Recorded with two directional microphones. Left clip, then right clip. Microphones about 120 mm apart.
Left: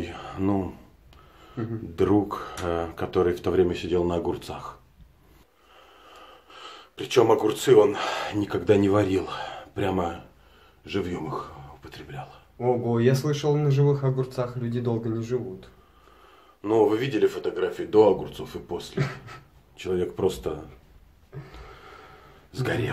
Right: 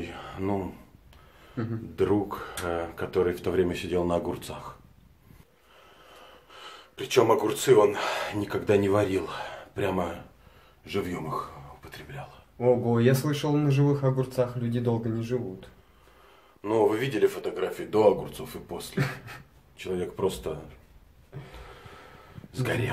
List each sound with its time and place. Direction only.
0.0 s a sound: 30° left (ahead or behind)
1.6 s speech: 25° right (ahead or behind)
2.0 s speech: 35° left (ahead or behind)
6.5 s speech: 25° left (ahead or behind)
12.5 s speech: 20° right (ahead or behind)
16.6 s speech: 25° left (ahead or behind)
19.8 s speech: 35° left (ahead or behind)
22.5 s a man's voice: 20° left (ahead or behind)